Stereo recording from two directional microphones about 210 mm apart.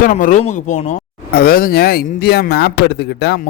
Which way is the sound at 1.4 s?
45° left (ahead or behind).